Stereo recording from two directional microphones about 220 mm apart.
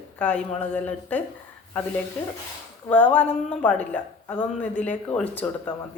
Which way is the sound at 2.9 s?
5° left (ahead or behind).